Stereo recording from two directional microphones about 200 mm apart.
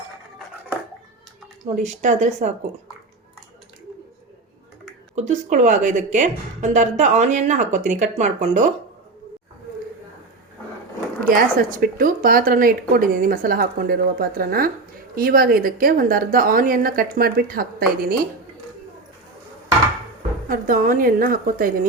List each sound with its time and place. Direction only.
1.7 s a woman's voice: 40° right (ahead or behind)
5.1 s a woman's voice: 35° right (ahead or behind)
11.3 s a woman's voice: 45° right (ahead or behind)
20.5 s a woman's voice: 45° right (ahead or behind)